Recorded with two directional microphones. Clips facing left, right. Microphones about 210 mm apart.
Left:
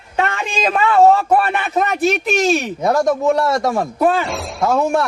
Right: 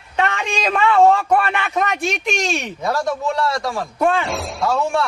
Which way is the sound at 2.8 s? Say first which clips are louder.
Left 6 dB; 50° left (ahead or behind).